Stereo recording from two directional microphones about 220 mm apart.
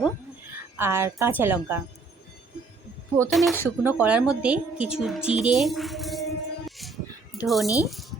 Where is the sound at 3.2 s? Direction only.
Centre (ahead or behind).